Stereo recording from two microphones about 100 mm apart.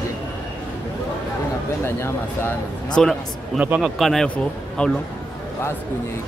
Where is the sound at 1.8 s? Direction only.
25° left (ahead or behind).